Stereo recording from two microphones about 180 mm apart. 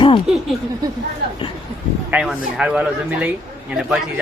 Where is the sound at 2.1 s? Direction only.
5° right (ahead or behind).